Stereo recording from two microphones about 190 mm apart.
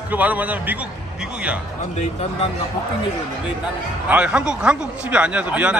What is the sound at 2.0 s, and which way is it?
Speech, 35° left (ahead or behind).